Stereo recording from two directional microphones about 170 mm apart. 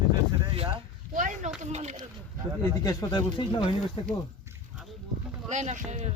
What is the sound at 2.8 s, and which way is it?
Speech, 20° left (ahead or behind).